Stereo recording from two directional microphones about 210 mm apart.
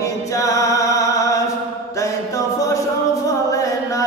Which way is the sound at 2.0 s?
15° left (ahead or behind).